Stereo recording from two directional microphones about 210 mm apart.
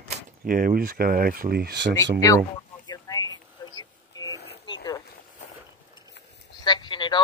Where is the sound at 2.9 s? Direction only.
15° left (ahead or behind).